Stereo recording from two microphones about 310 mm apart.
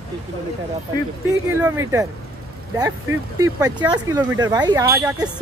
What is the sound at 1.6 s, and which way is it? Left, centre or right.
Speech, centre.